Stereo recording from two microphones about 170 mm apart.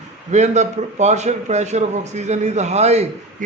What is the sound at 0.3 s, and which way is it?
A man's voice, 45° right (ahead or behind).